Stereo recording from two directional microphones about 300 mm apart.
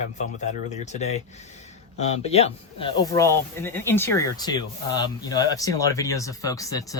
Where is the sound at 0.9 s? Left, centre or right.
Left.